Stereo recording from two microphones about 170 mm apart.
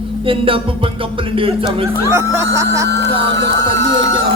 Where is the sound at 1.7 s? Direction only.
30° right (ahead or behind).